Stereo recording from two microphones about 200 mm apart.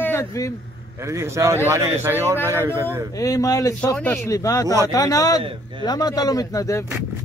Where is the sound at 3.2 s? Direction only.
15° left (ahead or behind).